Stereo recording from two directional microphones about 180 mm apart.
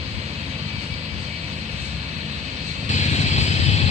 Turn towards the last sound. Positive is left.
turn(degrees=40)  # may be behind; listen again after turning